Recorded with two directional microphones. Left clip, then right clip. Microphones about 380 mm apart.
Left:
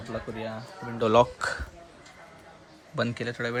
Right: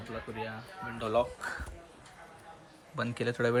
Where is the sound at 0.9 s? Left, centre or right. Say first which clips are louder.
Left 9 dB; centre.